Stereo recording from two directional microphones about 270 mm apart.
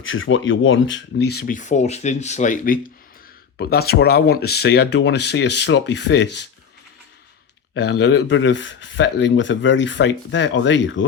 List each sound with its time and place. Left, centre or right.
0.0 s speech: left
7.7 s speech: left